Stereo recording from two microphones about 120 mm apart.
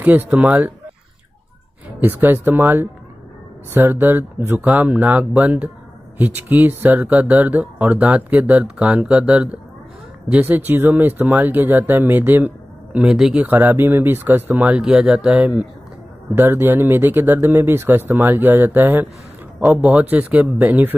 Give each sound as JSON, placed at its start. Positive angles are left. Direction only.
{"t": 0.0, "sound": "speech", "side_deg": -15}
{"t": 2.0, "sound": "speech", "side_deg": -15}